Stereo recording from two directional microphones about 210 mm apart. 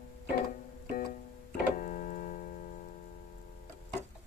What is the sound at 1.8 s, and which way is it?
Keyboard, 40° left (ahead or behind).